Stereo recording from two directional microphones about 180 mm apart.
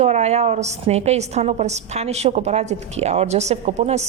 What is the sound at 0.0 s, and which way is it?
A woman's voice, 40° right (ahead or behind).